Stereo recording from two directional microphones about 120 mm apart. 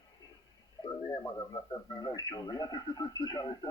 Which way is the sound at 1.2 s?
30° left (ahead or behind).